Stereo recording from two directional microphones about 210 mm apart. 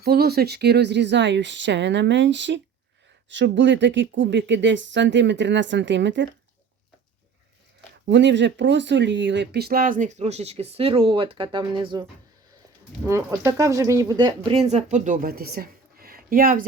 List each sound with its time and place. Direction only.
0.0 s speech: 50° right (ahead or behind)
8.0 s speech: 55° right (ahead or behind); by 12.0 s 20° right (ahead or behind)
13.1 s speech: 15° right (ahead or behind); by 16.6 s 40° right (ahead or behind)